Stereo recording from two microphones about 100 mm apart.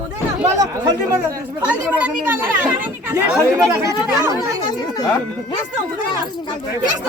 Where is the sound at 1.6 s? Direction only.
15° right (ahead or behind).